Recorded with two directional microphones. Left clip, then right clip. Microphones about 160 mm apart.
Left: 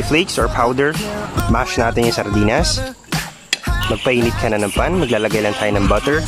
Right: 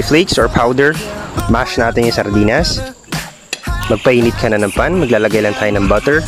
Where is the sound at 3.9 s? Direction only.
25° right (ahead or behind).